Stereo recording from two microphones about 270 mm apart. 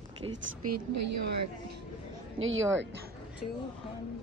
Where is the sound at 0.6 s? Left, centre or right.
Right.